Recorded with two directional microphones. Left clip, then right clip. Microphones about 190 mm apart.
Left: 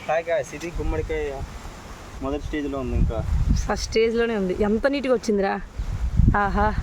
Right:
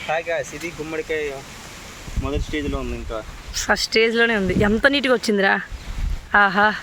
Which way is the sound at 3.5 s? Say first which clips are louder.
Right 5 dB; centre (ahead or behind).